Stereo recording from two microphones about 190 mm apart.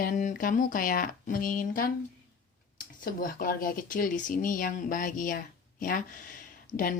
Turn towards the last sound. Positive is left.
turn(degrees=20)  # may be behind; listen again after turning